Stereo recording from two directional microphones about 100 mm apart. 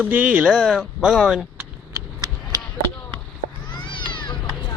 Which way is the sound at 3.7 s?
55° left (ahead or behind).